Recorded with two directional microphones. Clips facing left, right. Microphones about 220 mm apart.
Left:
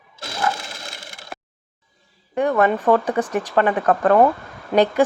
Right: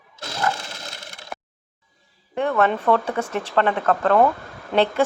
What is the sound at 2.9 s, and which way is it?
Speech, 15° left (ahead or behind).